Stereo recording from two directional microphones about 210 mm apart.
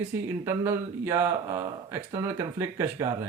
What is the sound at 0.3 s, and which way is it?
Speech, 10° right (ahead or behind).